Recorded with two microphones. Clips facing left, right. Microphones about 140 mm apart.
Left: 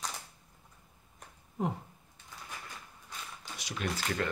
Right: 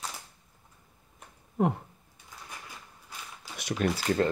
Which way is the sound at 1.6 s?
60° right (ahead or behind).